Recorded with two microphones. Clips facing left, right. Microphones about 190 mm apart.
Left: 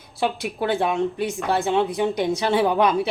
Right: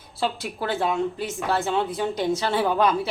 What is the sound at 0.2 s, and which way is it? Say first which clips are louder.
A woman's voice: left 3 dB; 15° left (ahead or behind).